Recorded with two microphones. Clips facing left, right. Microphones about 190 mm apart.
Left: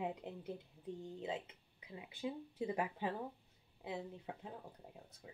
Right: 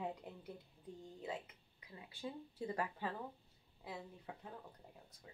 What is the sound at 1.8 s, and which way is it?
Speech, 20° left (ahead or behind).